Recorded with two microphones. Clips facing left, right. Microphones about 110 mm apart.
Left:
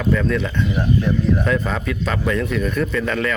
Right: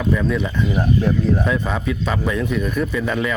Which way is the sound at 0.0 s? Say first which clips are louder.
Even; 10° right (ahead or behind).